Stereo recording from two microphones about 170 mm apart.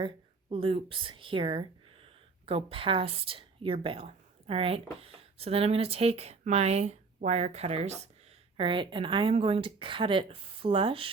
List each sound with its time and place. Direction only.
0.5 s a woman's voice: 30° right (ahead or behind)